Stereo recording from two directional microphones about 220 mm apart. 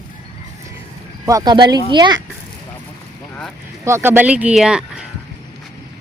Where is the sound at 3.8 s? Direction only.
10° right (ahead or behind).